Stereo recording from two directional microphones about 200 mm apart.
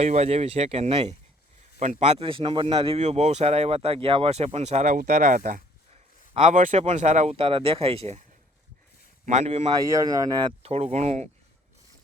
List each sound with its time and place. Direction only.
0.0 s speech: 30° right (ahead or behind)
9.2 s speech: 35° right (ahead or behind)
9.7 s speech: 15° right (ahead or behind); by 11.3 s 35° right (ahead or behind)